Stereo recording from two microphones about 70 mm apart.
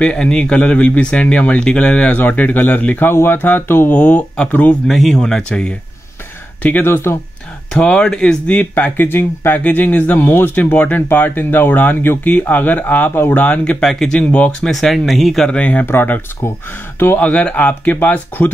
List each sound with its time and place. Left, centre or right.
0.0 s speech: centre
4.8 s speech: centre
6.6 s speech: left
7.7 s speech: centre
14.7 s speech: centre
15.5 s speech: centre
15.8 s speech: left
17.2 s speech: centre